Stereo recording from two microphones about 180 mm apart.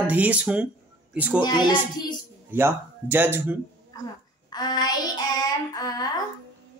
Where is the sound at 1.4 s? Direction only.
25° left (ahead or behind).